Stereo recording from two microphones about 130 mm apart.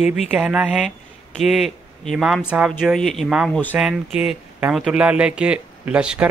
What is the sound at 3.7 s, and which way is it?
Speech, 5° right (ahead or behind).